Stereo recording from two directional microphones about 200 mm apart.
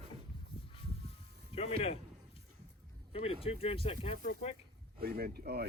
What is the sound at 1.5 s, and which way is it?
Music, 30° left (ahead or behind).